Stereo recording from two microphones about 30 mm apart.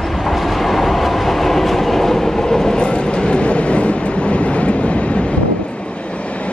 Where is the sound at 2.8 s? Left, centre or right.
Left.